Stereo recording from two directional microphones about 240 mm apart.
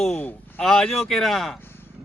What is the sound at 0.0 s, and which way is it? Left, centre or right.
Speech, centre.